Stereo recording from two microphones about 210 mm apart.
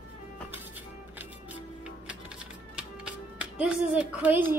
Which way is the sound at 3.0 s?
5° right (ahead or behind).